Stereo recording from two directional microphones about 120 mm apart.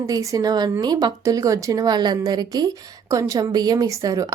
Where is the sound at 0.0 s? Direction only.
25° right (ahead or behind).